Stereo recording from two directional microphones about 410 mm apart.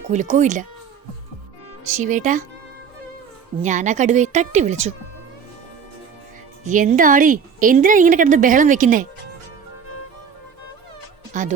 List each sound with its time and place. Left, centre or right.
0.1 s a woman's voice: centre
1.9 s a woman's voice: centre
3.6 s a woman's voice: centre
6.7 s a woman's voice: centre
11.3 s a woman's voice: centre